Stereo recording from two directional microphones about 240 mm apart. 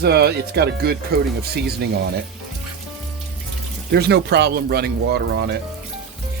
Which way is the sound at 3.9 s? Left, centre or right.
Right.